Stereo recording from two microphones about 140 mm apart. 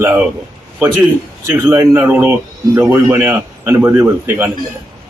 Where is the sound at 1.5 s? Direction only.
20° right (ahead or behind).